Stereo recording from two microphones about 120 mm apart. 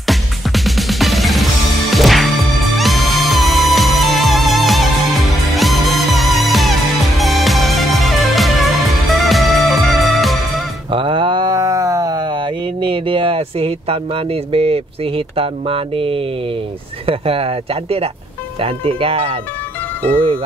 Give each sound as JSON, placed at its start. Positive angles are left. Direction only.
{"t": 0.7, "sound": "music", "side_deg": 0}
{"t": 10.9, "sound": "sheep", "side_deg": -45}
{"t": 17.0, "sound": "speech", "side_deg": -50}